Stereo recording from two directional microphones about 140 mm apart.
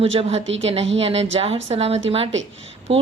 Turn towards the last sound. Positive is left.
turn(degrees=-45)  # may be behind; listen again after turning